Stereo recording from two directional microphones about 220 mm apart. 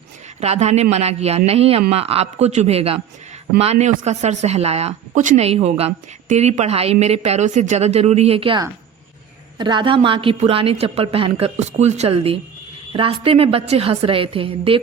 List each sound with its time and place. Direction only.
0.3 s speech: 30° right (ahead or behind)